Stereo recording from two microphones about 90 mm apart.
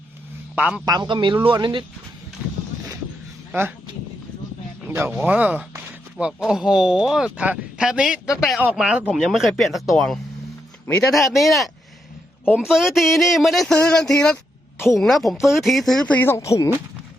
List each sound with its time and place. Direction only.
0.5 s a man's voice: 15° right (ahead or behind)
0.9 s speech: 55° right (ahead or behind)
4.9 s speech: 25° right (ahead or behind)
6.4 s speech: 5° right (ahead or behind)
16.0 s speech: 20° left (ahead or behind)